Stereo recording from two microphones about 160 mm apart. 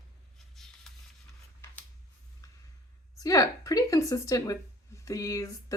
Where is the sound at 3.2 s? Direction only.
20° left (ahead or behind).